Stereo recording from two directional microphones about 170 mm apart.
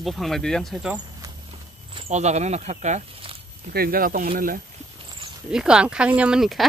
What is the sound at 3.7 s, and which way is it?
Speech, 60° right (ahead or behind).